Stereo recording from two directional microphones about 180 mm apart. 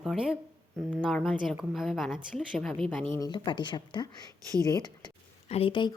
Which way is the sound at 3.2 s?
25° left (ahead or behind).